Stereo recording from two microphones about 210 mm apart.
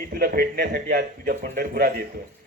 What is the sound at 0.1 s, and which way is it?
A man's voice, 45° right (ahead or behind).